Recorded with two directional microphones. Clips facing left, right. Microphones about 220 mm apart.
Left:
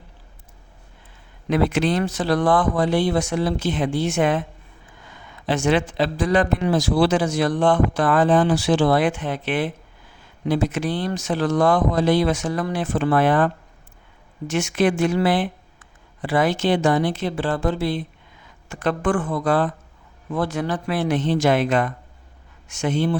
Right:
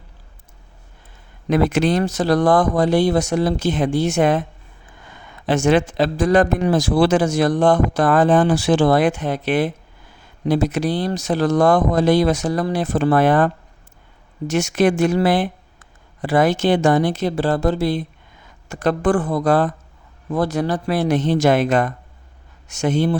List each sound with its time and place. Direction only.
1.5 s a man's voice: 45° right (ahead or behind)
5.5 s a man's voice: 45° right (ahead or behind)